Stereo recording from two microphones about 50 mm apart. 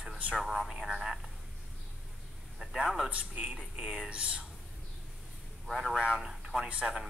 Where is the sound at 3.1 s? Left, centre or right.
Right.